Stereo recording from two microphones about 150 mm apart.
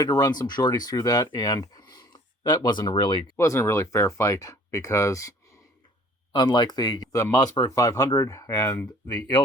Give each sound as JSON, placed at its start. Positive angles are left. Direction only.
{"t": 0.0, "sound": "speech", "side_deg": 25}
{"t": 3.3, "sound": "speech", "side_deg": 20}
{"t": 6.3, "sound": "speech", "side_deg": 30}